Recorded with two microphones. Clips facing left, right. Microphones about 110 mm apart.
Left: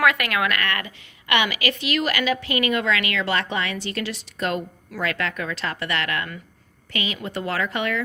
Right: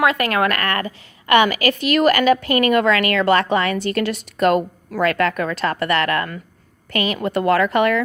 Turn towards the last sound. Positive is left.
turn(degrees=-55)  # may be behind; listen again after turning